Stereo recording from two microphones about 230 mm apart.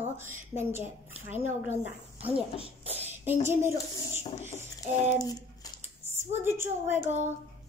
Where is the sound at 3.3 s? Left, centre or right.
Centre.